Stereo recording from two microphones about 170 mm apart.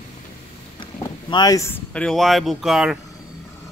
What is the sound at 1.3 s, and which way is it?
Speech, 20° left (ahead or behind).